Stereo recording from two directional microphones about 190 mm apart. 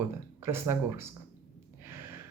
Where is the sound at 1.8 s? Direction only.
10° right (ahead or behind).